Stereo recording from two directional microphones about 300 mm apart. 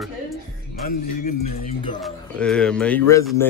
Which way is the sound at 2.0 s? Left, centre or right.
Centre.